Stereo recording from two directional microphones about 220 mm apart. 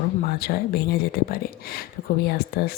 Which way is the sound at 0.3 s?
45° left (ahead or behind).